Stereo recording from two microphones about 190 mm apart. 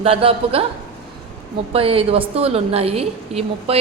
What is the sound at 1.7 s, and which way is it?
A woman's voice, 30° right (ahead or behind).